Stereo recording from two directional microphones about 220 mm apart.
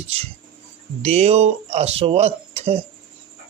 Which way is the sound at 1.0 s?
30° right (ahead or behind).